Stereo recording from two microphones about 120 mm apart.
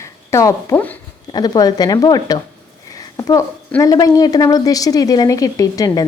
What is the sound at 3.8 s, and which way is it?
A woman's voice, 30° left (ahead or behind).